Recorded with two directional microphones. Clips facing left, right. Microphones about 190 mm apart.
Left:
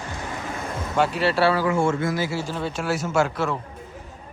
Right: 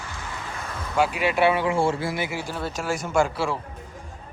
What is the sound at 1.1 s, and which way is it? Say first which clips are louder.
Speech: left 1 dB; 15° right (ahead or behind).